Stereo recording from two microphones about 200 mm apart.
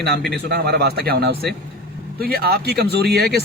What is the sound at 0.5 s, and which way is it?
Speech, 55° right (ahead or behind).